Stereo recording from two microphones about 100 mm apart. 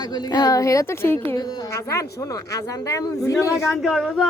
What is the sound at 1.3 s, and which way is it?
A woman's voice, 40° left (ahead or behind).